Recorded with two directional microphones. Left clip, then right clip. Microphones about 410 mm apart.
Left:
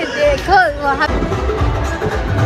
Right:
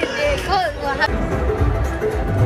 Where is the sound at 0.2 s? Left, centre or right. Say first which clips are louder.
Left 9 dB; centre.